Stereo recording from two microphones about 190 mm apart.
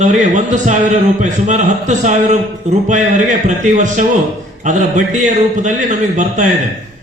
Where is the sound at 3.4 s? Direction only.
40° right (ahead or behind).